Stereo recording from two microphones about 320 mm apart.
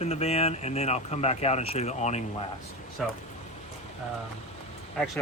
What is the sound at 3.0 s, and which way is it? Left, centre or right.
Speech, centre.